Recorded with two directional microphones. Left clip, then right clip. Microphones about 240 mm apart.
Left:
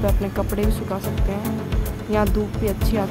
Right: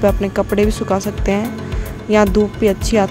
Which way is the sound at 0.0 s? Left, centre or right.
Right.